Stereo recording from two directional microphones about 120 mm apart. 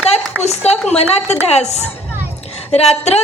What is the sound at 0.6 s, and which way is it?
A woman's voice, 60° left (ahead or behind).